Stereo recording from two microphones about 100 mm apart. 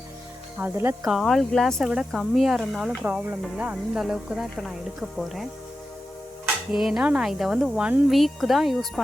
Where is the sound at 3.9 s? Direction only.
5° right (ahead or behind).